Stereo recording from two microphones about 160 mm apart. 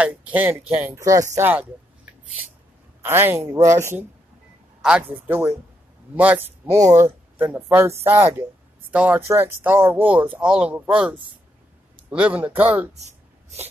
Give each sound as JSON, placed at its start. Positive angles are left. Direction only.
{"t": 0.0, "sound": "speech", "side_deg": -10}
{"t": 3.0, "sound": "speech", "side_deg": -15}
{"t": 5.1, "sound": "speech", "side_deg": -15}